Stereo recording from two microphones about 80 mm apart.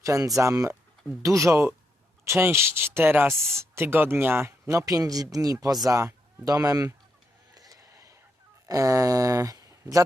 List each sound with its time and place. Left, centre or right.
0.0 s speech: right
7.5 s a sound: right
8.6 s speech: right